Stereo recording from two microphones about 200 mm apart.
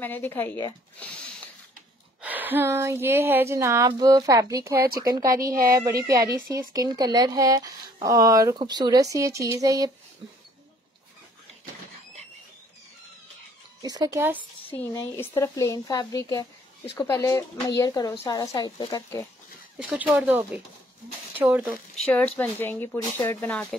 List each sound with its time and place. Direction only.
0.0 s speech: 10° left (ahead or behind)
2.2 s speech: 10° right (ahead or behind)
13.8 s speech: 20° right (ahead or behind)
14.7 s speech: 10° left (ahead or behind)
19.8 s speech: 5° right (ahead or behind)
22.0 s speech: 5° left (ahead or behind)